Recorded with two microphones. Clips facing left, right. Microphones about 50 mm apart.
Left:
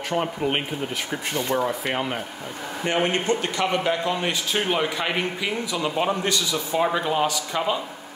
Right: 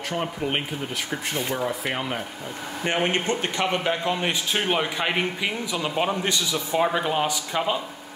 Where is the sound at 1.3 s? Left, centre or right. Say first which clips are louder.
Left 4 dB; centre.